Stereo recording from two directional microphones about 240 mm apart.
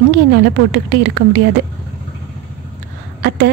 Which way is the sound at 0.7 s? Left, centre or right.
Right.